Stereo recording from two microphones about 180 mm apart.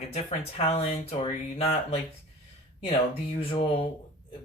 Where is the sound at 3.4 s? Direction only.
30° left (ahead or behind).